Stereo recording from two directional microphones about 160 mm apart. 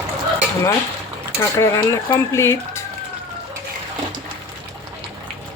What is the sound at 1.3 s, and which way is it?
Speech, 15° left (ahead or behind).